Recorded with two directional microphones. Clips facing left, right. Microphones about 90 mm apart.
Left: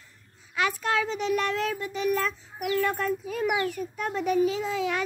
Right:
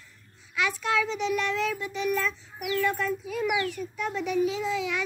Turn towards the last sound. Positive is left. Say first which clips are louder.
# left 1 dB
turn(degrees=45)  # may be behind; listen again after turning